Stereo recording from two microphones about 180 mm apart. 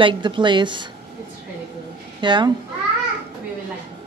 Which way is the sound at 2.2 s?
25° right (ahead or behind).